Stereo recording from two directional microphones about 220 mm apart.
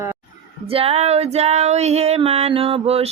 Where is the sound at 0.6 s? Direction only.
25° right (ahead or behind).